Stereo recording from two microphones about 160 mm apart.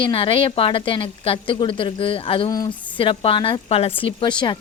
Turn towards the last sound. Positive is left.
turn(degrees=30)  # may be behind; listen again after turning